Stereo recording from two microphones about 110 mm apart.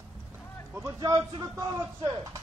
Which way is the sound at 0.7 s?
30° right (ahead or behind).